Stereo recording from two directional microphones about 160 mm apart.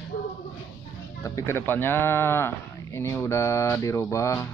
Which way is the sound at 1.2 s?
20° left (ahead or behind).